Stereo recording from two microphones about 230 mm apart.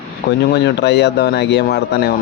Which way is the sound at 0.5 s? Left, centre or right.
Left.